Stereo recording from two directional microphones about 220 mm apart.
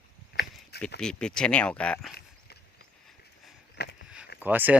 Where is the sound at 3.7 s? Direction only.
50° left (ahead or behind).